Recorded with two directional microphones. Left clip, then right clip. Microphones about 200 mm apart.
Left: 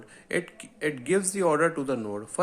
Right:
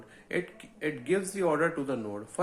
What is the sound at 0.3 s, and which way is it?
Speech, 35° left (ahead or behind).